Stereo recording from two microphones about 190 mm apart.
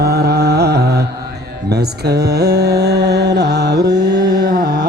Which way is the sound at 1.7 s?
60° right (ahead or behind).